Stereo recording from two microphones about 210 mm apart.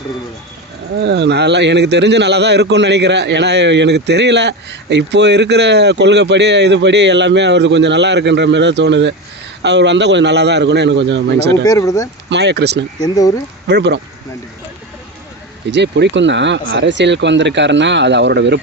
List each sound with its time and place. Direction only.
1.0 s a man's voice: 55° right (ahead or behind)
11.6 s speech: 15° left (ahead or behind)
12.3 s a man's voice: 55° right (ahead or behind)
13.0 s speech: 15° left (ahead or behind)
13.7 s speech: 55° right (ahead or behind)
15.7 s a man's voice: 55° right (ahead or behind)